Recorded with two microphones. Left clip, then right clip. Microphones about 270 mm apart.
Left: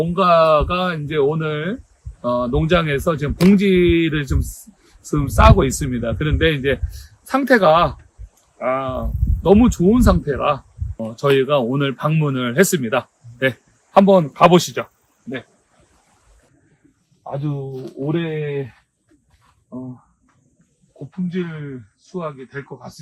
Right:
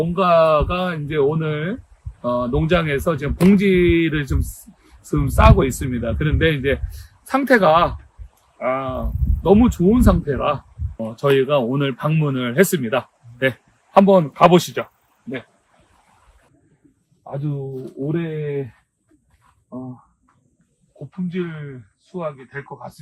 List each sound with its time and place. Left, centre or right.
0.0 s speech: centre
17.5 s speech: left
18.0 s speech: centre
22.1 s speech: right